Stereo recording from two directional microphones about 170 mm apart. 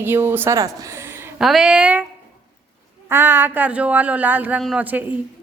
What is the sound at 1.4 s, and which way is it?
Speech, centre (ahead or behind).